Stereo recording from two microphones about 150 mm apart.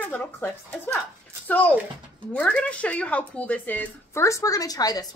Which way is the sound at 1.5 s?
10° left (ahead or behind).